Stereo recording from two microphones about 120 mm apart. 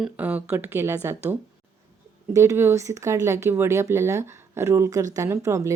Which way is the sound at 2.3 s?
25° right (ahead or behind).